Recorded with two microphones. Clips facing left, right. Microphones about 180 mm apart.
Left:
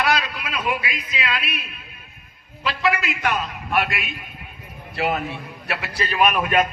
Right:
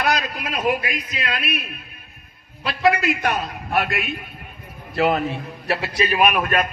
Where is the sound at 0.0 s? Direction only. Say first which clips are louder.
Even; 50° right (ahead or behind).